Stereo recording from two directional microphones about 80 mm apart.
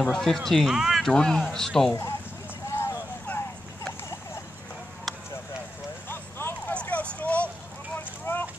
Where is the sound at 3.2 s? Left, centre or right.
Left.